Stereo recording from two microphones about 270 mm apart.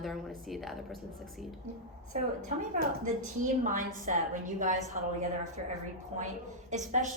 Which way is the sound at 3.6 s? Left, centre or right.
Right.